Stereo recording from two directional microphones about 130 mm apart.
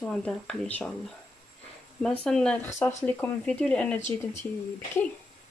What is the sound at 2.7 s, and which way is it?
Speech, 20° left (ahead or behind).